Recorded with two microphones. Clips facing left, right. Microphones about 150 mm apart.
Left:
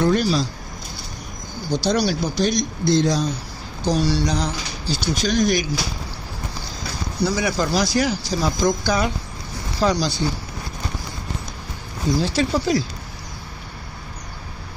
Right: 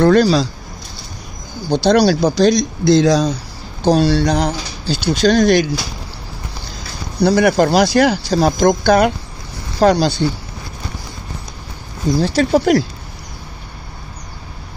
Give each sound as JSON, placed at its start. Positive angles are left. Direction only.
{"t": 0.0, "sound": "speech", "side_deg": -90}
{"t": 1.7, "sound": "speech", "side_deg": -70}
{"t": 3.9, "sound": "speech", "side_deg": -70}
{"t": 7.2, "sound": "speech", "side_deg": -65}
{"t": 12.2, "sound": "speech", "side_deg": -65}